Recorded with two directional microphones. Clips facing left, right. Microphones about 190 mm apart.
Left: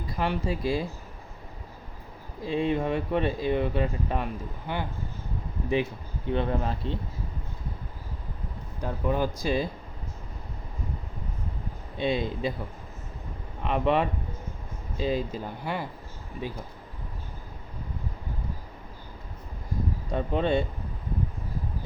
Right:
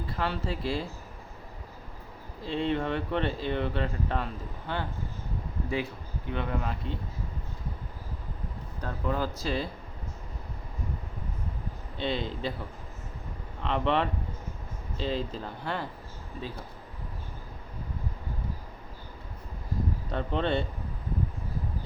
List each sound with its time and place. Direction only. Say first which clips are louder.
0.0 s speech: left 3 dB; 15° left (ahead or behind)
2.4 s speech: left 3 dB; 15° left (ahead or behind)
6.3 s speech: left 5 dB; 30° left (ahead or behind)
8.8 s speech: left 4 dB; 15° left (ahead or behind)
11.9 s speech: left 4 dB; 15° left (ahead or behind)
13.6 s speech: left 3 dB; 15° left (ahead or behind)
20.1 s speech: left 4 dB; 10° left (ahead or behind)